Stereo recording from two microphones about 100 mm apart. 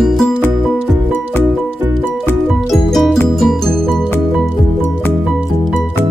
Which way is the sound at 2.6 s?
Centre (ahead or behind).